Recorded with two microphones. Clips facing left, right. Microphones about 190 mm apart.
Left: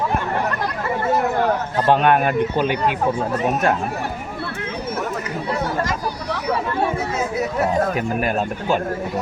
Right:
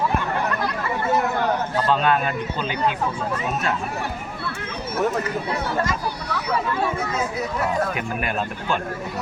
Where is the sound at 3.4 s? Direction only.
55° left (ahead or behind).